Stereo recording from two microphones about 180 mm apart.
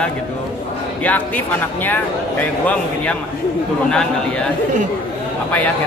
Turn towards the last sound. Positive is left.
turn(degrees=5)  # may be behind; listen again after turning